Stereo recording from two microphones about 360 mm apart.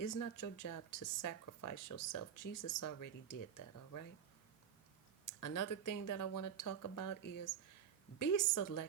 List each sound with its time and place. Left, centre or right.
0.0 s speech: left
5.2 s speech: left
8.2 s speech: left